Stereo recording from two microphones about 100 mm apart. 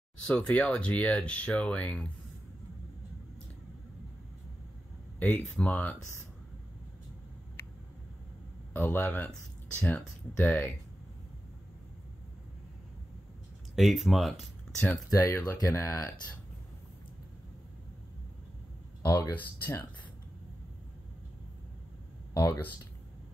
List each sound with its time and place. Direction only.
0.3 s speech: 15° left (ahead or behind)
5.6 s speech: 15° left (ahead or behind)
8.7 s speech: 15° left (ahead or behind)
13.7 s speech: centre (ahead or behind)
15.0 s speech: 30° left (ahead or behind)
19.0 s speech: 20° left (ahead or behind)
22.3 s speech: 25° left (ahead or behind)